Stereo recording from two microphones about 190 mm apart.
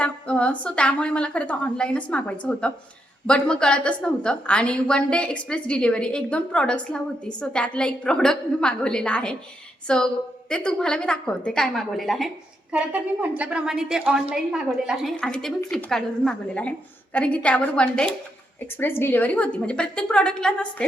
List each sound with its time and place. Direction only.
0.0 s a woman's voice: 5° left (ahead or behind)